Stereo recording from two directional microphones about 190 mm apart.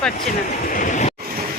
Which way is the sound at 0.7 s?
45° left (ahead or behind).